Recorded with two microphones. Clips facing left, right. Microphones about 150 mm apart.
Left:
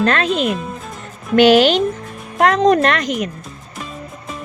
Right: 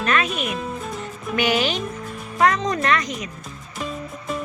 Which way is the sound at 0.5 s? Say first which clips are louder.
Left 3 dB; centre (ahead or behind).